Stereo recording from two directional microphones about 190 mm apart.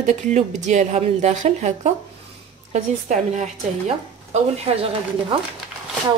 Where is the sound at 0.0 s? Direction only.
40° right (ahead or behind).